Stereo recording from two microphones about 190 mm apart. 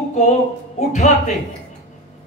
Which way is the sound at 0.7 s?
40° left (ahead or behind).